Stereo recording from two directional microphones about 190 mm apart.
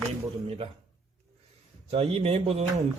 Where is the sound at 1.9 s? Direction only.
30° right (ahead or behind).